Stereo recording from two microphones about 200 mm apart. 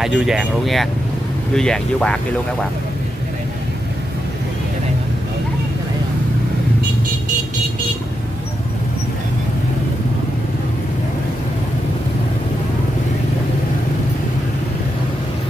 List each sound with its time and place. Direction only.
0.0 s speech: centre (ahead or behind)